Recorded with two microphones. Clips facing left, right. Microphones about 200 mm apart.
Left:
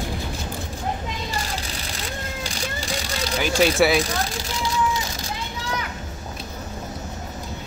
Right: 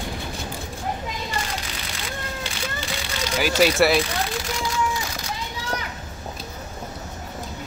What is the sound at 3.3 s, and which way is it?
Speech, 5° right (ahead or behind).